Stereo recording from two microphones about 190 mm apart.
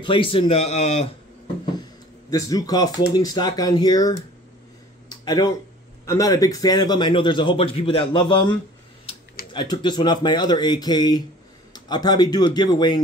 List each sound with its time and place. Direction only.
0.0 s a man's voice: 25° left (ahead or behind)
2.3 s a man's voice: 20° left (ahead or behind)
5.1 s a sound: 20° left (ahead or behind)
6.0 s a man's voice: 20° left (ahead or behind)